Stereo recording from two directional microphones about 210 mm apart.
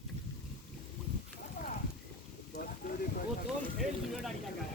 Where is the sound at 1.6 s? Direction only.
40° left (ahead or behind).